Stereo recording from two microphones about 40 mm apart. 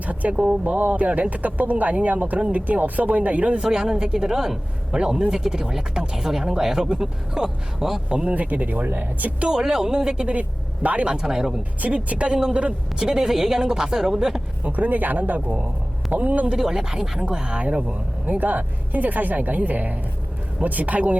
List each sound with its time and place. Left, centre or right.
0.0 s speech: right
3.6 s speech: centre
8.3 s speech: right
8.9 s a woman's voice: right
9.5 s speech: centre
10.8 s speech: right
11.1 s speech: centre
11.8 s speech: right
13.0 s speech: centre
14.6 s a woman's voice: right
16.6 s speech: centre
18.3 s a woman's voice: right